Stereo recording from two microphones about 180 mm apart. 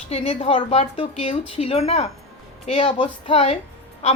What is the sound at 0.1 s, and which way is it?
Speech, 35° left (ahead or behind).